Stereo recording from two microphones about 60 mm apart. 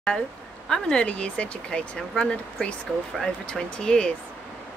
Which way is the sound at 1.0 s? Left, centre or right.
Left.